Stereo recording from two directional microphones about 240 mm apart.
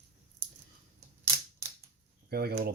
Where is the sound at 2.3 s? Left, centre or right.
Right.